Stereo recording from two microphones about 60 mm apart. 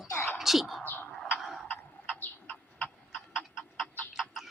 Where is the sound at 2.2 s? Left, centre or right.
Left.